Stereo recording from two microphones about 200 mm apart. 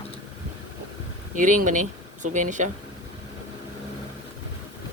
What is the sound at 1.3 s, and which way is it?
Speech, 40° right (ahead or behind).